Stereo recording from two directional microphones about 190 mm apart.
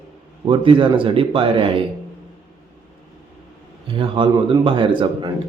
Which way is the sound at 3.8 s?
25° right (ahead or behind).